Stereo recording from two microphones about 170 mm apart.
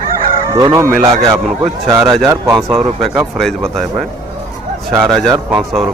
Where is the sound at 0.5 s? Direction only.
20° right (ahead or behind).